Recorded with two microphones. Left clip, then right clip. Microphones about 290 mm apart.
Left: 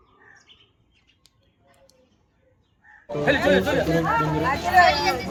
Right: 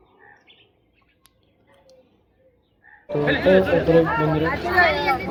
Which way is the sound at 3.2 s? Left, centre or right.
Centre.